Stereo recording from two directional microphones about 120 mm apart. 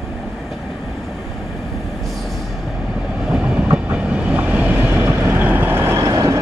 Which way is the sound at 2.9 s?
5° right (ahead or behind).